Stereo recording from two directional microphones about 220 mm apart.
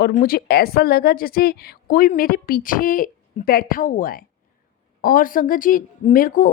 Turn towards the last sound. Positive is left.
turn(degrees=40)  # may be behind; listen again after turning